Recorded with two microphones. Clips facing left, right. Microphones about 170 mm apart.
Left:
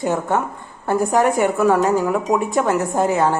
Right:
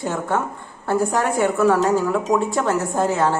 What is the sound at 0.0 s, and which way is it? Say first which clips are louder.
A woman's voice: left 3 dB; 20° left (ahead or behind).